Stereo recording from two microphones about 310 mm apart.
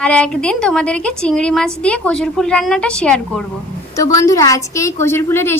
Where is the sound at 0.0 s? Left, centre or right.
Centre.